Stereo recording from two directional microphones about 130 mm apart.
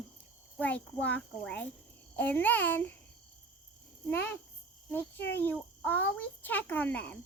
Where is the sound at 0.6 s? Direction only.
10° left (ahead or behind).